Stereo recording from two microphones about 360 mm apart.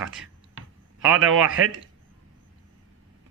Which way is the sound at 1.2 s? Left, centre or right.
Right.